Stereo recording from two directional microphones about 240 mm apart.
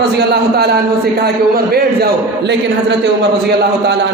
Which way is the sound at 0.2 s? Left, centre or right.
Right.